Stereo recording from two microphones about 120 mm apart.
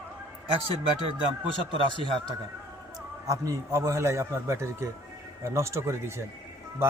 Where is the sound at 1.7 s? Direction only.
45° right (ahead or behind).